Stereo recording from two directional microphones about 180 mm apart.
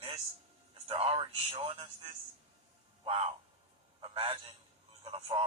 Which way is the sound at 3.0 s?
35° right (ahead or behind).